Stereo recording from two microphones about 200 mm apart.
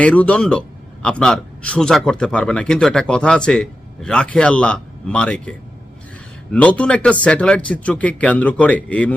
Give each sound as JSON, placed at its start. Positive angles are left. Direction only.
{"t": 0.0, "sound": "a man's voice", "side_deg": 5}